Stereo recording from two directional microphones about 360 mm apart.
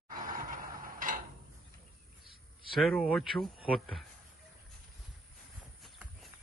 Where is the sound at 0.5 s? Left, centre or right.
Right.